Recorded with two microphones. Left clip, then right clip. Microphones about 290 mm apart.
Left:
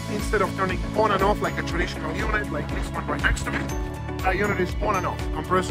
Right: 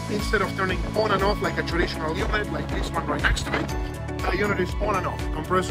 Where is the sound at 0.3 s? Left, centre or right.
Left.